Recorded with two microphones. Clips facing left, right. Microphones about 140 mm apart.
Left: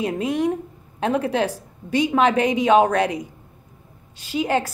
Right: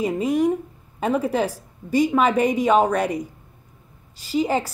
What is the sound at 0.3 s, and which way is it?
A woman's voice, 5° right (ahead or behind).